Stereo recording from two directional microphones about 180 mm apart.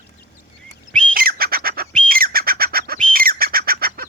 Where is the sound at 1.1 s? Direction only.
55° right (ahead or behind).